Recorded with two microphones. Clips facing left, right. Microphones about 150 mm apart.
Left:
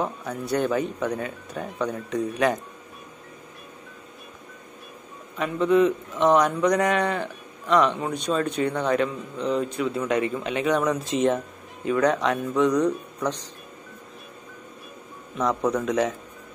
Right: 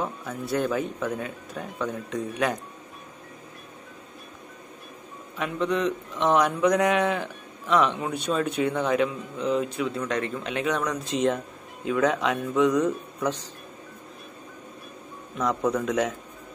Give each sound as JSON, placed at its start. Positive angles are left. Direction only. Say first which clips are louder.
{"t": 0.0, "sound": "a man's voice", "louder": "left 2 dB", "side_deg": 0}
{"t": 5.4, "sound": "a man's voice", "louder": "left 6 dB", "side_deg": 0}
{"t": 15.3, "sound": "a man's voice", "louder": "left 1 dB", "side_deg": 0}